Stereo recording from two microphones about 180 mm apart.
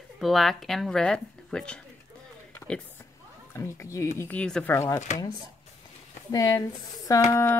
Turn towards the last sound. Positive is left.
turn(degrees=15)  # may be behind; listen again after turning